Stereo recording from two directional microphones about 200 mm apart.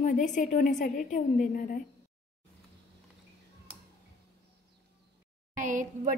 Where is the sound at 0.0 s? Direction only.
40° left (ahead or behind).